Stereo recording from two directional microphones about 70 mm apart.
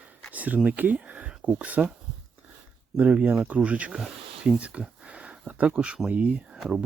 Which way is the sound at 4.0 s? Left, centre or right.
Centre.